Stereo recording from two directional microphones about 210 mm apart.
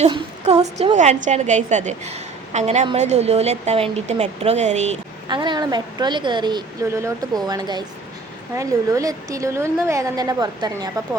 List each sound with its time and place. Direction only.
0.1 s a woman's voice: 30° right (ahead or behind)
5.3 s a woman's voice: 20° right (ahead or behind)